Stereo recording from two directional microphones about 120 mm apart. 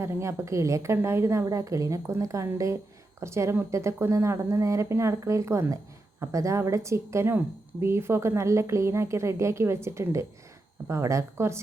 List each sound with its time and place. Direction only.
0.0 s speech: 25° right (ahead or behind)